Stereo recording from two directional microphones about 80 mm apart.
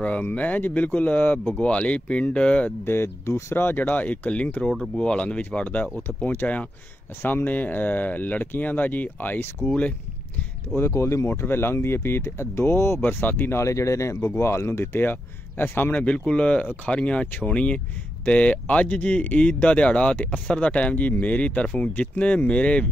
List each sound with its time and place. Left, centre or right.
0.0 s speech: centre
2.8 s speech: left
10.8 s speech: left; by 22.8 s centre